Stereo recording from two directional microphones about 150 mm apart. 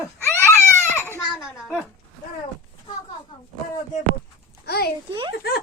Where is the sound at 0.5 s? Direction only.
15° left (ahead or behind).